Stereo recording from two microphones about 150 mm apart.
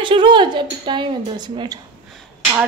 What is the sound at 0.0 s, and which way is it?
Speech, 30° right (ahead or behind).